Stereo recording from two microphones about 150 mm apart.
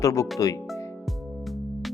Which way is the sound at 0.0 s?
20° left (ahead or behind).